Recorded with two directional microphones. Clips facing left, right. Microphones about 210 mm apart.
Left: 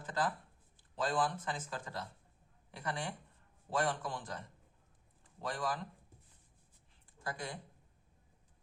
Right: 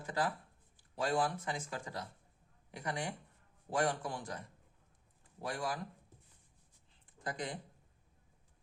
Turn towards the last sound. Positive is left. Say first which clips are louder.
# right 2 dB
turn(degrees=-20)  # may be behind; listen again after turning